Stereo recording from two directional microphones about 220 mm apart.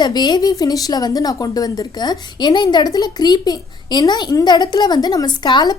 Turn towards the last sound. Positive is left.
turn(degrees=20)  # may be behind; listen again after turning